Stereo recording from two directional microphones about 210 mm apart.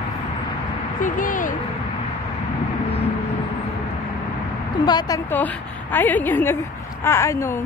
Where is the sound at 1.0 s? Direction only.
40° left (ahead or behind).